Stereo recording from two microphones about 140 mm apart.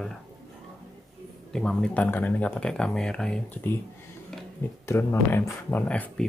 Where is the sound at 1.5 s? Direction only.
5° left (ahead or behind).